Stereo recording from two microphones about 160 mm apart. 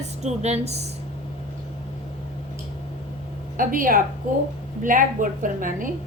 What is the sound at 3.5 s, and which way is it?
A woman's voice, 60° right (ahead or behind).